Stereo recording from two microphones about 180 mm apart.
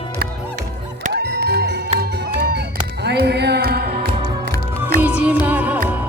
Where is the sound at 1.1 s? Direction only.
65° right (ahead or behind).